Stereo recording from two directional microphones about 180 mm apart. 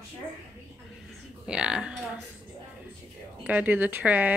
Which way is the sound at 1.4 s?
5° right (ahead or behind).